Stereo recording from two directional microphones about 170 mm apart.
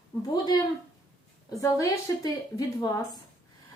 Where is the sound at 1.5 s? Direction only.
20° left (ahead or behind).